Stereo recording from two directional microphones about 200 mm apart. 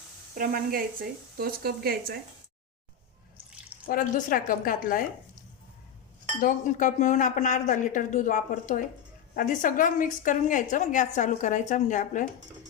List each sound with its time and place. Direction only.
0.3 s speech: 45° right (ahead or behind)
3.8 s a woman's voice: 45° left (ahead or behind)
6.4 s a woman's voice: 40° left (ahead or behind)